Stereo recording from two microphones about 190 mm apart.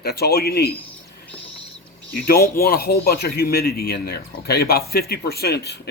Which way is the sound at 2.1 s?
50° left (ahead or behind).